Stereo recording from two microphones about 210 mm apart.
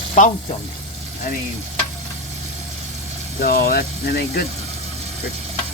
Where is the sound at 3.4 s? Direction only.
45° left (ahead or behind).